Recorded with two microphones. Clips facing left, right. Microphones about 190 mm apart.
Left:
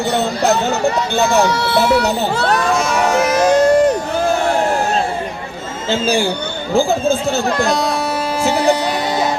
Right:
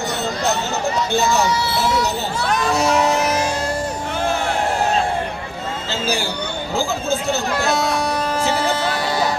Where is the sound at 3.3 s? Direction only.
65° left (ahead or behind).